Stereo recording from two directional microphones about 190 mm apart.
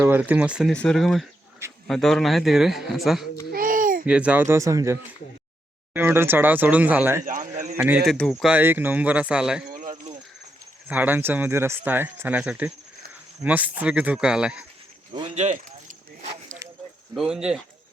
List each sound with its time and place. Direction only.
0.0 s a man's voice: 10° right (ahead or behind)
3.5 s a sound: 45° right (ahead or behind)
4.0 s speech: 5° right (ahead or behind)
7.3 s speech: 40° right (ahead or behind)
7.8 s a man's voice: 5° right (ahead or behind)
9.9 s cricket: 40° right (ahead or behind)
10.8 s speech: 10° right (ahead or behind)
15.4 s a sound: 40° right (ahead or behind)
17.2 s a man's voice: 5° right (ahead or behind)